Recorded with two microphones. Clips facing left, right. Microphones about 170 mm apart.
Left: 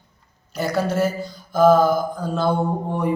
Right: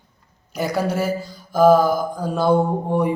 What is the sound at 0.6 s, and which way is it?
A man's voice, 10° right (ahead or behind).